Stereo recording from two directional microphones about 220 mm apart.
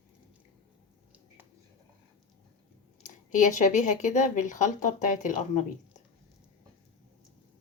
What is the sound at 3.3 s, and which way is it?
Speech, 35° left (ahead or behind).